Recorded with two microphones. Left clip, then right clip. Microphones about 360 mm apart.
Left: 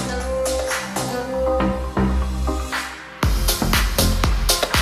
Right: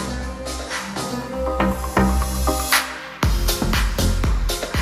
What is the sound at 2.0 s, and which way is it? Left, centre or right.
Music, right.